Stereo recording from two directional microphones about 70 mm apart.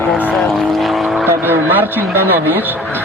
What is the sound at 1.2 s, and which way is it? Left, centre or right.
Vehicle, right.